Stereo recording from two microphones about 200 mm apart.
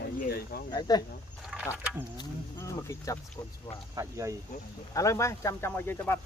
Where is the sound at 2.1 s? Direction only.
15° left (ahead or behind).